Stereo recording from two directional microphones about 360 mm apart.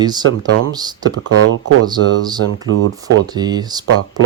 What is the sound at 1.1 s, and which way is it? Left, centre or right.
Speech, right.